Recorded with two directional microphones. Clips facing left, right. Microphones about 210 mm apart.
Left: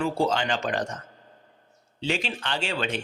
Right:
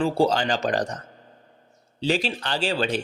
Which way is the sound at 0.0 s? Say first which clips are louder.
Right 4 dB; 35° right (ahead or behind).